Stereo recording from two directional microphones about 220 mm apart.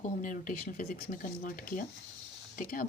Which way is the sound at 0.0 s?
35° left (ahead or behind).